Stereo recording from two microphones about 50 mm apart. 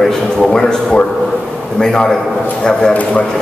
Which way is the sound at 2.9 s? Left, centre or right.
Left.